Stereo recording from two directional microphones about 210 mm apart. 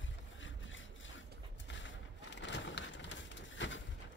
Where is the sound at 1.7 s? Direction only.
60° left (ahead or behind).